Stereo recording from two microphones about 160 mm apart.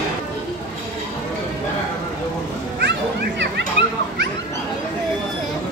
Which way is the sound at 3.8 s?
35° left (ahead or behind).